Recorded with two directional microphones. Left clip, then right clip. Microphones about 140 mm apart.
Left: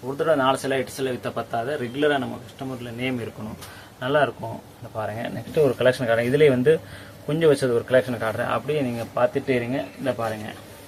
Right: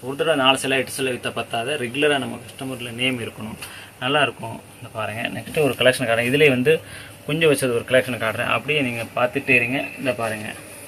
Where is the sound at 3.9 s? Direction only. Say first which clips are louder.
Right 1 dB; 35° left (ahead or behind).